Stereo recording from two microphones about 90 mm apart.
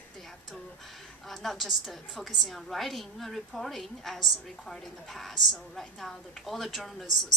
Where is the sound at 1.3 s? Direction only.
Centre (ahead or behind).